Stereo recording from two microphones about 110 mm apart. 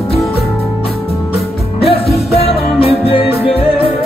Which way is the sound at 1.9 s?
65° left (ahead or behind).